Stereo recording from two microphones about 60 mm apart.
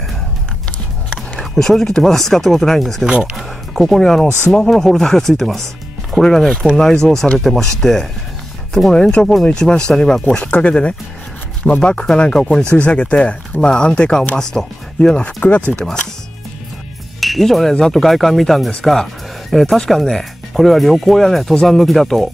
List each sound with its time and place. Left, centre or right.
1.4 s speech: centre
3.1 s speech: centre
3.7 s speech: centre
10.2 s speech: left
15.4 s speech: left
17.2 s speech: centre